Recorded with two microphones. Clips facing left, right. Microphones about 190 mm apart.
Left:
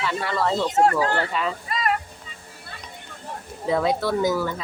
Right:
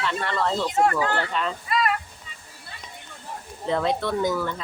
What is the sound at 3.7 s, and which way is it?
Speech, 5° left (ahead or behind).